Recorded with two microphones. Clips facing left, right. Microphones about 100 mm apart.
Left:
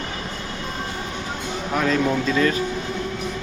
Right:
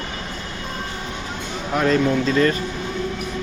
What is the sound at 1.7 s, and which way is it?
Speech, centre (ahead or behind).